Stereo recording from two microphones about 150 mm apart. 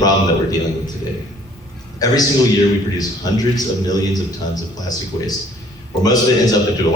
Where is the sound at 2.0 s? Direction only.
25° left (ahead or behind).